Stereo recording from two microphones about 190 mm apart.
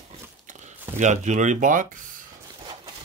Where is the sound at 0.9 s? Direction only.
40° right (ahead or behind).